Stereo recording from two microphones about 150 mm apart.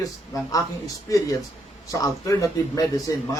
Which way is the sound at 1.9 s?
20° left (ahead or behind).